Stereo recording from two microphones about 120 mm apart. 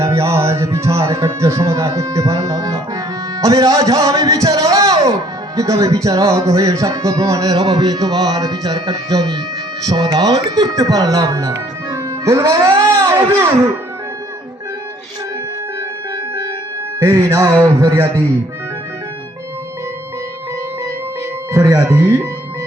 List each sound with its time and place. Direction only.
0.0 s a man's voice: 20° right (ahead or behind)
17.0 s a man's voice: 30° right (ahead or behind)
21.5 s a man's voice: 25° right (ahead or behind)